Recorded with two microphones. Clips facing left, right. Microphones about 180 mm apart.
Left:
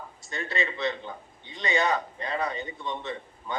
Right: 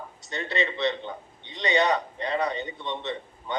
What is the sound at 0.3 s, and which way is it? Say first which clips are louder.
A man's voice: right 3 dB; 25° right (ahead or behind).